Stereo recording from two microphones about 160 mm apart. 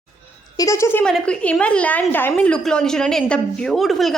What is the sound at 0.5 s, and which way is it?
A woman's voice, 20° left (ahead or behind).